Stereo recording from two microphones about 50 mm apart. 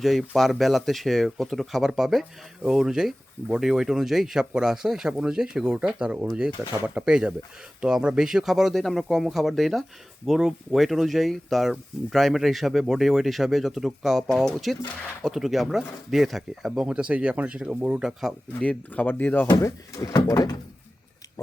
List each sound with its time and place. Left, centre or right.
0.0 s speech: centre
16.7 s speech: centre
18.0 s speech: centre
18.6 s speech: left
19.0 s speech: left
19.6 s speech: left